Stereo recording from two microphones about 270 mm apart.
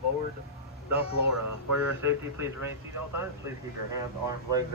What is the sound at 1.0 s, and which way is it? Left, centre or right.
Speech, left.